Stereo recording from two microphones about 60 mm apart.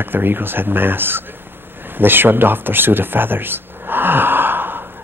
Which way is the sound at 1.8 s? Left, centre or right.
Right.